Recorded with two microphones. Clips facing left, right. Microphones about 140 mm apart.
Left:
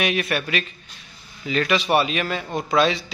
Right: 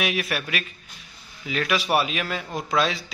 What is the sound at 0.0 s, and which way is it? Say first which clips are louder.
A man's voice: left 3 dB; centre (ahead or behind).